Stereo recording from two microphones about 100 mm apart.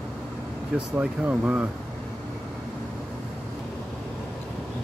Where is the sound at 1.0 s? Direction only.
15° right (ahead or behind).